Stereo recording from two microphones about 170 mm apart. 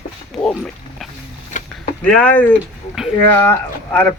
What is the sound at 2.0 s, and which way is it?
Speech, 10° left (ahead or behind).